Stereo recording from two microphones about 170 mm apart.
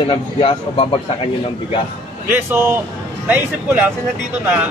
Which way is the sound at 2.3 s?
10° right (ahead or behind).